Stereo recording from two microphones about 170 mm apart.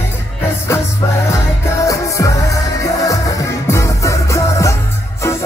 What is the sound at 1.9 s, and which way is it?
Music, 20° left (ahead or behind).